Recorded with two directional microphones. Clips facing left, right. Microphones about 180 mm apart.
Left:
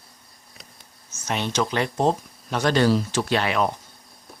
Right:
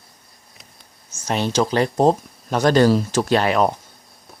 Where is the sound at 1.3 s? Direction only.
35° right (ahead or behind).